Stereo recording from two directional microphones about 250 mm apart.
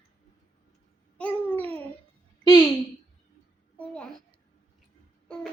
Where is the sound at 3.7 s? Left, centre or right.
Centre.